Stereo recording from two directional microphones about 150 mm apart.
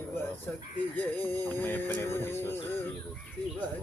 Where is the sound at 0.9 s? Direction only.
10° left (ahead or behind).